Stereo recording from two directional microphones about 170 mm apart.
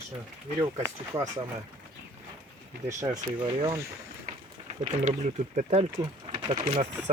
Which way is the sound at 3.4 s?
30° right (ahead or behind).